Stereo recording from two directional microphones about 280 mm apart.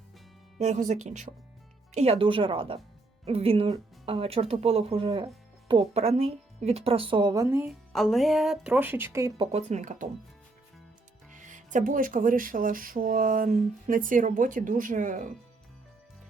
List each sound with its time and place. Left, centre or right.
0.6 s a woman's voice: right
9.5 s speech: right
11.3 s speech: right